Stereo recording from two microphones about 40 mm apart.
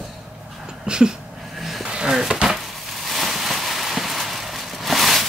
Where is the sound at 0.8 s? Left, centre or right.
Centre.